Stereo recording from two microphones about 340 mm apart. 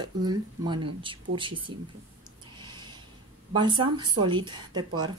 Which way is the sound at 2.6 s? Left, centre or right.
Centre.